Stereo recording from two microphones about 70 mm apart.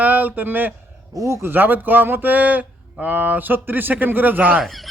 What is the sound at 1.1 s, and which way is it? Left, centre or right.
Speech, right.